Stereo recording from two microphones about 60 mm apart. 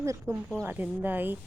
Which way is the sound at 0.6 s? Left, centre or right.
Right.